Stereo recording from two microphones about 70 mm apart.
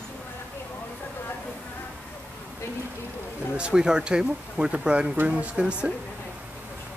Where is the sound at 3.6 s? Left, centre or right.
Centre.